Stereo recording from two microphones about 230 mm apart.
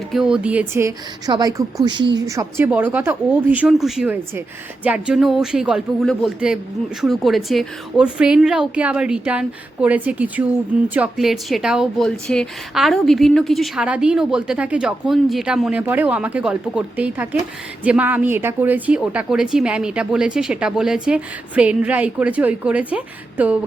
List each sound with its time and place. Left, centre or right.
0.1 s a woman's voice: centre